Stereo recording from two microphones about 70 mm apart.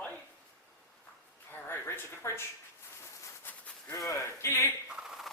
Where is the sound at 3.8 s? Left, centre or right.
Left.